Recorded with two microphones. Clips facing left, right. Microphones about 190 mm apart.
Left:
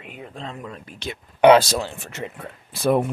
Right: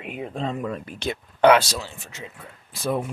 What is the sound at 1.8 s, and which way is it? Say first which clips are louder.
Speech: left 7 dB; 60° left (ahead or behind).